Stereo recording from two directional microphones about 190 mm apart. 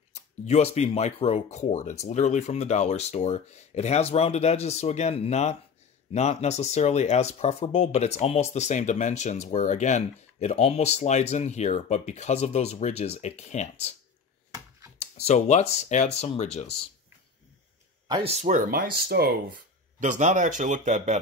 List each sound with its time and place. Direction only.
0.1 s speech: 35° left (ahead or behind)
15.0 s speech: 35° left (ahead or behind)
18.0 s speech: 30° right (ahead or behind); by 19.3 s 55° right (ahead or behind)
20.0 s speech: 40° right (ahead or behind)